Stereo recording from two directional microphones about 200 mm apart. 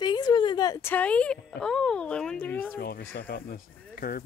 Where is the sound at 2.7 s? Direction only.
50° left (ahead or behind).